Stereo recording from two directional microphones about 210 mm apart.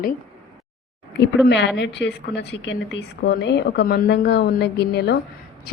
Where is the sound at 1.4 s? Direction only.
55° left (ahead or behind).